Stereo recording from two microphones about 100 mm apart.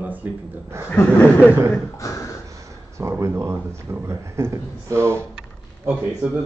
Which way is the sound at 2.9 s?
30° right (ahead or behind).